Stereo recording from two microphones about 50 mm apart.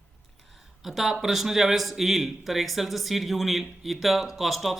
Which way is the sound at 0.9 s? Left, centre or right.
Centre.